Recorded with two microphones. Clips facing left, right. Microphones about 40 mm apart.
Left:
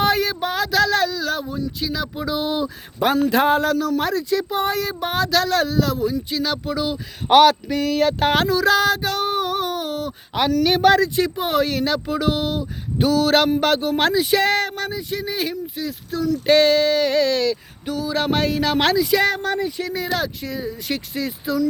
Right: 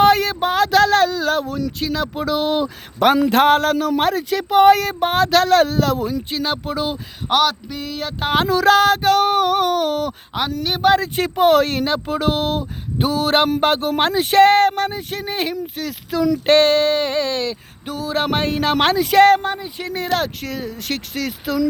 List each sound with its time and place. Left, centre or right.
0.0 s a sound: right
1.5 s a sound: right
1.8 s speech: right
4.9 s speech: right
6.3 s speech: right
7.3 s a sound: centre
7.7 s a sound: centre
8.4 s speech: right
10.6 s speech: centre
11.0 s speech: right
14.2 s speech: right
16.5 s speech: right
19.0 s speech: right